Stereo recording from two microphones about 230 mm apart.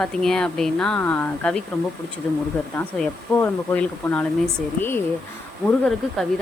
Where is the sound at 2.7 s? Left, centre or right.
Centre.